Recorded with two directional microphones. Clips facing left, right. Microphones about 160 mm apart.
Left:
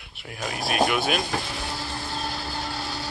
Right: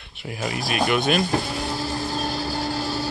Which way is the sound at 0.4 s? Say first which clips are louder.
Even; centre (ahead or behind).